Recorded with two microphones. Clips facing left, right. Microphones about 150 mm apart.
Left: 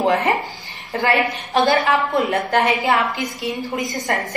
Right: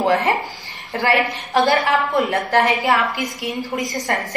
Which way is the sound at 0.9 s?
20° left (ahead or behind).